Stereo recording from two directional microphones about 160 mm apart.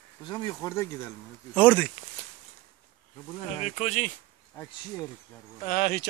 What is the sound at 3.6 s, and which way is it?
Speech, 45° left (ahead or behind).